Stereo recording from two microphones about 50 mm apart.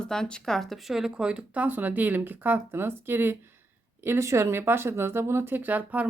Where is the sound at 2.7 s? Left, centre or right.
Right.